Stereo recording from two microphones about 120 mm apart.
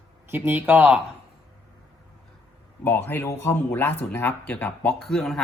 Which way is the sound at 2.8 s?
15° left (ahead or behind).